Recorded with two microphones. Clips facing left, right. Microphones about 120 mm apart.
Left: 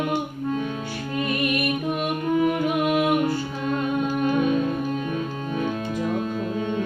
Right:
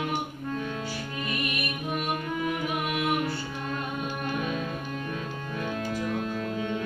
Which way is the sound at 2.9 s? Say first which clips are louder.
Left 6 dB; 45° left (ahead or behind).